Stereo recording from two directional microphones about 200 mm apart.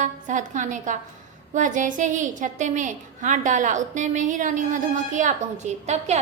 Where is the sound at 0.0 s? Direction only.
40° right (ahead or behind).